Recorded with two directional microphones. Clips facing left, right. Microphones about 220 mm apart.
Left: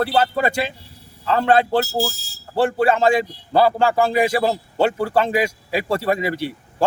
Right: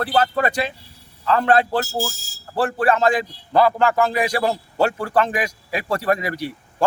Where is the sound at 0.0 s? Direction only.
25° left (ahead or behind).